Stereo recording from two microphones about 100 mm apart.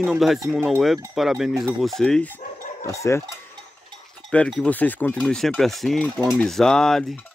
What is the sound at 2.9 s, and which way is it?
Cowbell, 30° left (ahead or behind).